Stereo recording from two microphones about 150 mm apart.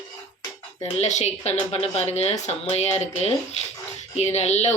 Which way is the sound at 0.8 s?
50° left (ahead or behind).